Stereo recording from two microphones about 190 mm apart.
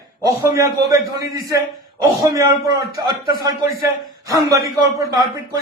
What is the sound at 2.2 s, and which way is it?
A man's voice, 15° right (ahead or behind).